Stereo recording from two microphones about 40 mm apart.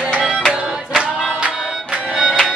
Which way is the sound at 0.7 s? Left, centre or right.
Centre.